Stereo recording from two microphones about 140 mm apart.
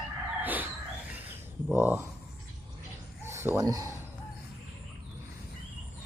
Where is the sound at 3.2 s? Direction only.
20° right (ahead or behind).